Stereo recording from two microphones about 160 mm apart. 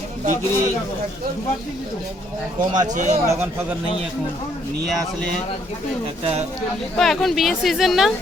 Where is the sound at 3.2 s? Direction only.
15° right (ahead or behind).